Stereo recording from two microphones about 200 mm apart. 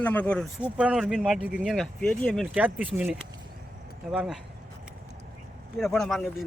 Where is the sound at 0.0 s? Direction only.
10° left (ahead or behind).